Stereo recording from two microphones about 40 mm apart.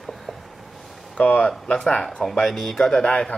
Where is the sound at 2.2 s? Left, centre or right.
Centre.